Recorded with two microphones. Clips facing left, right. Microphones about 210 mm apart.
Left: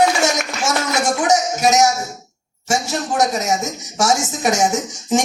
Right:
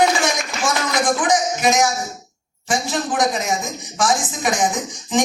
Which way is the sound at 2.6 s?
45° left (ahead or behind).